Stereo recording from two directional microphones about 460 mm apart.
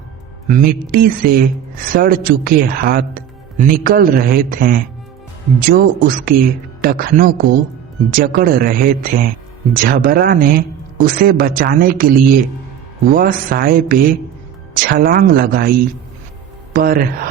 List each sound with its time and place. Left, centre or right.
0.4 s speech: centre
16.7 s speech: centre